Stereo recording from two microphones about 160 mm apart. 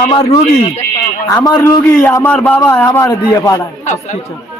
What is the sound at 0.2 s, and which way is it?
Speech, 40° left (ahead or behind).